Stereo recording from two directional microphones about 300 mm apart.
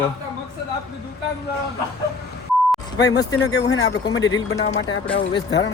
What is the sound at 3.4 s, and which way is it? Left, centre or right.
Speech, left.